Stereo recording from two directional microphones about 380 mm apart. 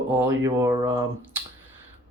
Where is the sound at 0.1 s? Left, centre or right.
Centre.